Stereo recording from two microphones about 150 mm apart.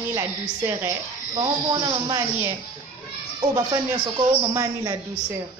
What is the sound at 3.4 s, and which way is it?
A woman's voice, 25° right (ahead or behind).